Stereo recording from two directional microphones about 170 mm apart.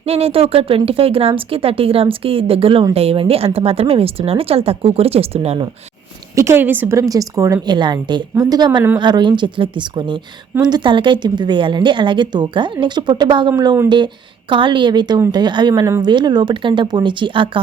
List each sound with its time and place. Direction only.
0.0 s speech: 35° right (ahead or behind)
6.3 s a woman's voice: 15° right (ahead or behind)